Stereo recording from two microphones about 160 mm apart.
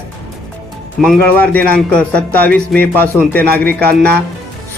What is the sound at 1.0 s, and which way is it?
A man's voice, 5° left (ahead or behind).